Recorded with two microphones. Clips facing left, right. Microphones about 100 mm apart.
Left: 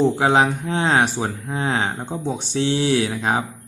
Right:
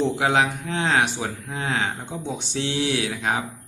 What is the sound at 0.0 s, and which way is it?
Speech, 35° left (ahead or behind).